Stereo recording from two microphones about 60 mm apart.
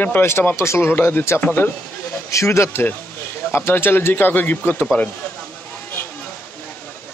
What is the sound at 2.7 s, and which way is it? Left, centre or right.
A man's voice, left.